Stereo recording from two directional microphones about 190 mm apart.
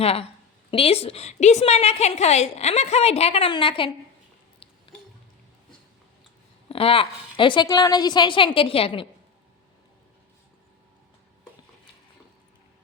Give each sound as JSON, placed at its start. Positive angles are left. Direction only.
{"t": 0.0, "sound": "a woman's voice", "side_deg": 30}
{"t": 6.7, "sound": "a woman's voice", "side_deg": 30}